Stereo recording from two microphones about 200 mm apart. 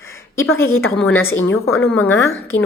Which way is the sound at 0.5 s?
10° left (ahead or behind).